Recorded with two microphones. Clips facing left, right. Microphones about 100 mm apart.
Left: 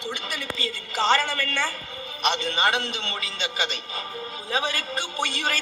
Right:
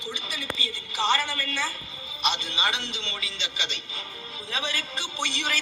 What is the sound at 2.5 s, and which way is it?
A man's voice, 55° left (ahead or behind).